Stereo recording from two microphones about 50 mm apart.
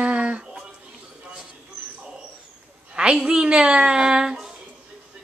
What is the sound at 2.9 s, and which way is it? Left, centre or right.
A woman's voice, centre.